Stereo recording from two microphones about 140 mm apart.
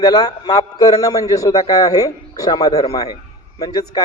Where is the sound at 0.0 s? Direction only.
30° left (ahead or behind).